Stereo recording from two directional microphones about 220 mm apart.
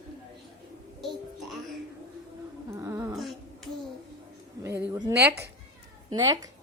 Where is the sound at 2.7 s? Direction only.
15° right (ahead or behind).